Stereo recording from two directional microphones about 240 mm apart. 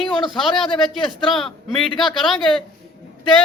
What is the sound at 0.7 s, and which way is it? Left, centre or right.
A woman's voice, centre.